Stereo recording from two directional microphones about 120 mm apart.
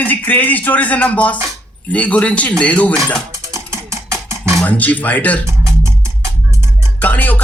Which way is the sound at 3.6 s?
25° right (ahead or behind).